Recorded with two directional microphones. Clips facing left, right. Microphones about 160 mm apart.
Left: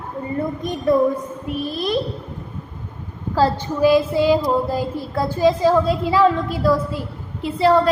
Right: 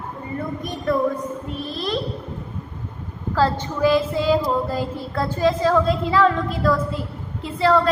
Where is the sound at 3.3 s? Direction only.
15° left (ahead or behind).